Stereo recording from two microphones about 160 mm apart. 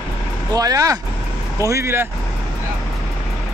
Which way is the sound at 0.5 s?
20° right (ahead or behind).